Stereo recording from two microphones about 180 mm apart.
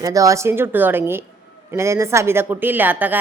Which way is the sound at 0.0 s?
20° right (ahead or behind).